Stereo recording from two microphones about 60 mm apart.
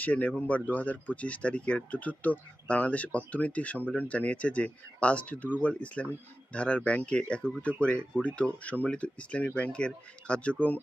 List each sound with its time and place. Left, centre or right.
0.0 s speech: left